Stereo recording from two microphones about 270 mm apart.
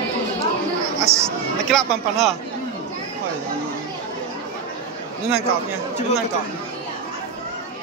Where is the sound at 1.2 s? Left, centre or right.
Centre.